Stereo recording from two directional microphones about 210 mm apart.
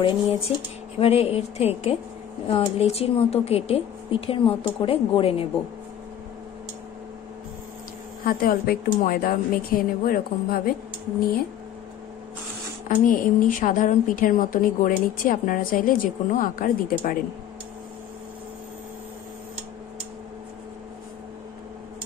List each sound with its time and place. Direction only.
0.9 s speech: 30° left (ahead or behind)
8.3 s a woman's voice: 45° left (ahead or behind)
12.8 s a woman's voice: 40° left (ahead or behind)